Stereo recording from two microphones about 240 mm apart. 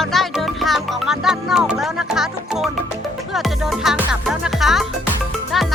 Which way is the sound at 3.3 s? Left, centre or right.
Centre.